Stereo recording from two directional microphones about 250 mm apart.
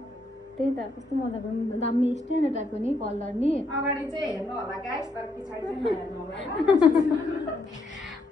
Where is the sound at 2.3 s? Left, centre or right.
Left.